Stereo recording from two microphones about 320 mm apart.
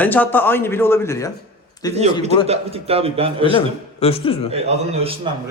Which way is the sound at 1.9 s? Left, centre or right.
Centre.